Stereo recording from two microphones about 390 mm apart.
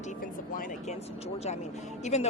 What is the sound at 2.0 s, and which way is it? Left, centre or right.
Speech, centre.